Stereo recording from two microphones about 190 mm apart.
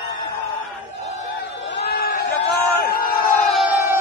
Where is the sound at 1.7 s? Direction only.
55° left (ahead or behind).